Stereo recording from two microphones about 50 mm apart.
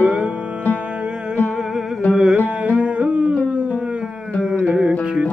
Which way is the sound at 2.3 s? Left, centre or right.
Right.